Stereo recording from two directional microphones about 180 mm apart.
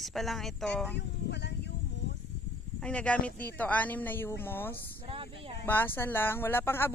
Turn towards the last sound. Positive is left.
turn(degrees=10)  # may be behind; listen again after turning